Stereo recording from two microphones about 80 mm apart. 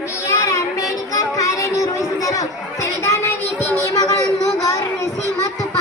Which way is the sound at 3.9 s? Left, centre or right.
Left.